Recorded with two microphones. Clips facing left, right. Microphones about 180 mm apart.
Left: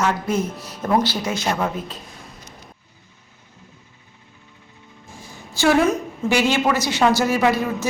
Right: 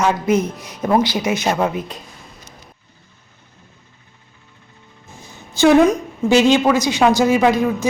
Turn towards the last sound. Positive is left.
turn(degrees=-15)  # may be behind; listen again after turning